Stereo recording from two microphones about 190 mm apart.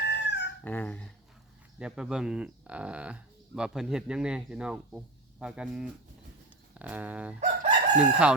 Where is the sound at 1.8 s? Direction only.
5° right (ahead or behind).